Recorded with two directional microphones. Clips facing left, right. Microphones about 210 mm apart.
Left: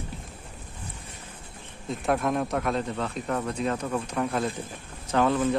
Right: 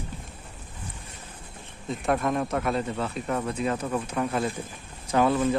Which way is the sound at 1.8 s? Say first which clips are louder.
Even; centre (ahead or behind).